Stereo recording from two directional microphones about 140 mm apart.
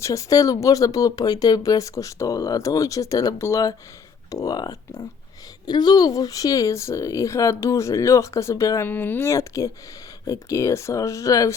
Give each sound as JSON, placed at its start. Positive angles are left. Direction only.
{"t": 0.0, "sound": "speech", "side_deg": 20}